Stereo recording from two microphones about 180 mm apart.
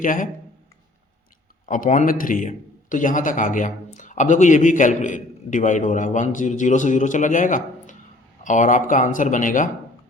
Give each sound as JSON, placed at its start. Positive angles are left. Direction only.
{"t": 0.0, "sound": "a man's voice", "side_deg": 45}
{"t": 1.6, "sound": "a man's voice", "side_deg": 45}